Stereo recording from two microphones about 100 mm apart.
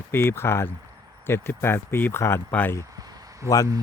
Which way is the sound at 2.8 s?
40° right (ahead or behind).